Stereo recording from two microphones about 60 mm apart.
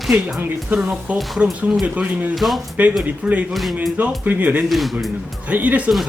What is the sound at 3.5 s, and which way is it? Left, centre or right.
Speech, centre.